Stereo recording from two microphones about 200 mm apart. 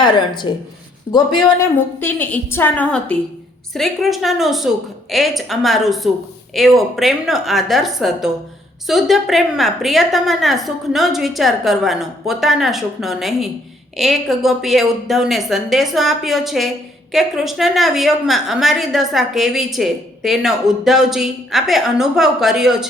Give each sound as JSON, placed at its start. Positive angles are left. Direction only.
{"t": 0.5, "sound": "speech", "side_deg": 25}
{"t": 1.5, "sound": "a woman's voice", "side_deg": 10}